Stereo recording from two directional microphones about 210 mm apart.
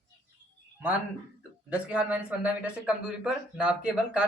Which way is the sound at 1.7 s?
5° right (ahead or behind).